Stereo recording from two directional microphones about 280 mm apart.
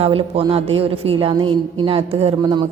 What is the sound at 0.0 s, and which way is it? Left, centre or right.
A woman's voice, centre.